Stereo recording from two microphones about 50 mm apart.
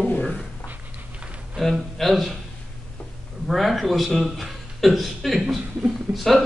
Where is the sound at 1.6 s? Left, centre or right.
Centre.